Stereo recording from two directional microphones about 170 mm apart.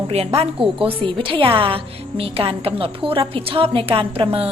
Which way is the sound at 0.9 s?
30° right (ahead or behind).